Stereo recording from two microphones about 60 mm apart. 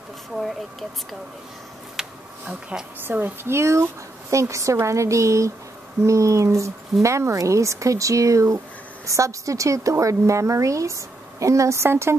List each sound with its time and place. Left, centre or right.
0.4 s speech: centre
2.0 s a sound: centre
2.7 s a woman's voice: centre
3.1 s a woman's voice: right